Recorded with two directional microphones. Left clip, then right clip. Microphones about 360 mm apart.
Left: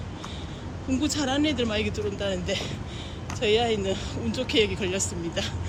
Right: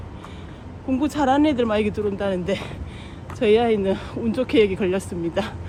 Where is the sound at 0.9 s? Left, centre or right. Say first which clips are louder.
Right 7 dB; centre.